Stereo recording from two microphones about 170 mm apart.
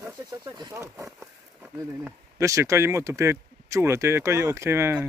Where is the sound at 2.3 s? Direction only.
20° right (ahead or behind).